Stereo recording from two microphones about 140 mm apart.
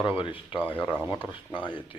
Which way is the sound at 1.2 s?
35° left (ahead or behind).